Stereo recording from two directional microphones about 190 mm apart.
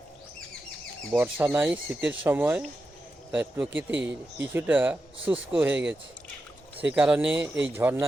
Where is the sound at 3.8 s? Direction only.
10° right (ahead or behind).